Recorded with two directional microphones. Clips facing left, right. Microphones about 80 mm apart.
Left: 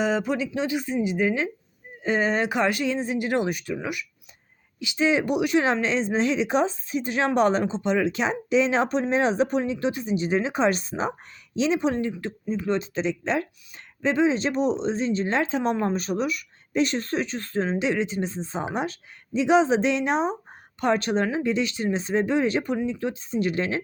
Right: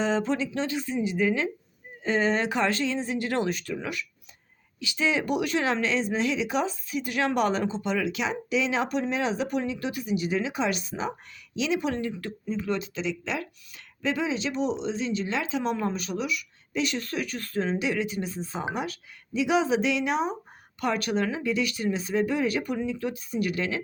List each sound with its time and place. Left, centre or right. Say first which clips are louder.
0.0 s speech: left 2 dB; centre; by 23.8 s left